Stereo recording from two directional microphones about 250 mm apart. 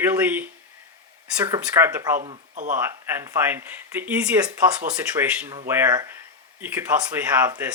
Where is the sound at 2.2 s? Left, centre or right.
Right.